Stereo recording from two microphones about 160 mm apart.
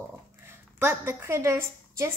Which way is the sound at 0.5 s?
10° right (ahead or behind).